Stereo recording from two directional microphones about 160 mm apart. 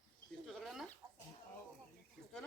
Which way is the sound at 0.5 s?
Centre (ahead or behind).